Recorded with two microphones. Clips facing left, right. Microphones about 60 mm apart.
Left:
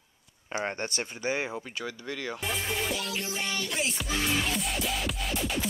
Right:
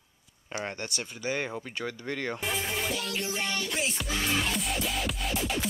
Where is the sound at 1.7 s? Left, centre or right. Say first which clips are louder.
Right 1 dB; centre.